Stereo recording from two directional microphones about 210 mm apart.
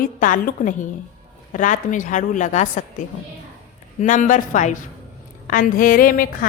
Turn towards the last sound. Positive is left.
turn(degrees=40)  # may be behind; listen again after turning